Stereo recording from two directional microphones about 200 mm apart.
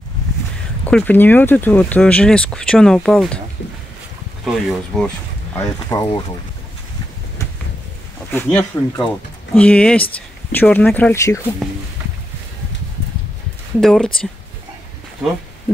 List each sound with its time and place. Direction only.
0.8 s speech: 10° left (ahead or behind)
4.6 s speech: 5° left (ahead or behind)
5.9 s speech: 20° left (ahead or behind)
8.3 s speech: 10° left (ahead or behind)
13.7 s speech: centre (ahead or behind)